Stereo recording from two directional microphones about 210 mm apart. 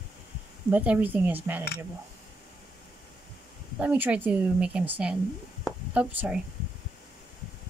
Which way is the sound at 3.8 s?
5° right (ahead or behind).